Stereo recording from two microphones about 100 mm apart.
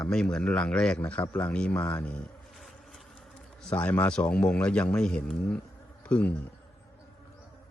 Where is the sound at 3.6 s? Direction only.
10° left (ahead or behind).